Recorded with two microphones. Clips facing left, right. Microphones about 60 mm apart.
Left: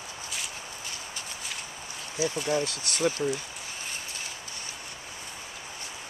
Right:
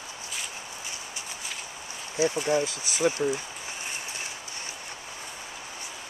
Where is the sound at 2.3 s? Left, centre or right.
Centre.